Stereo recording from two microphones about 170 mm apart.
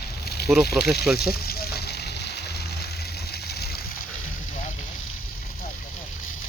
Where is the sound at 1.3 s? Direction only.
65° left (ahead or behind).